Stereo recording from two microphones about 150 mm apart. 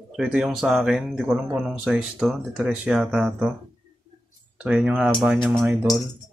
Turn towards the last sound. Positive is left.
turn(degrees=0)  # may be behind; listen again after turning